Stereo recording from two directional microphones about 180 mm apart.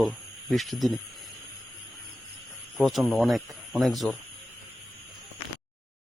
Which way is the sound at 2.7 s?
Centre (ahead or behind).